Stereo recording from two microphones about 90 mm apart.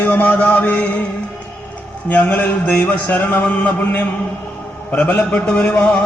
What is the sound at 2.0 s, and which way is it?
A man's voice, 20° left (ahead or behind).